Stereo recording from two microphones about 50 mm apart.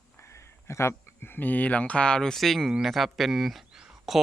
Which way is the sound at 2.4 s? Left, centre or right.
Centre.